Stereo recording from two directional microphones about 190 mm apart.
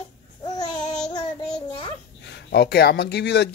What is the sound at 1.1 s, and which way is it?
Child singing, 25° left (ahead or behind).